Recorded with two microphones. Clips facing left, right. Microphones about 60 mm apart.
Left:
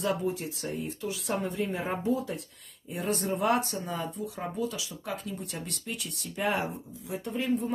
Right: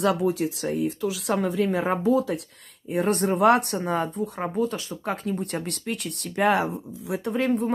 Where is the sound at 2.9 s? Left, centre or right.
Right.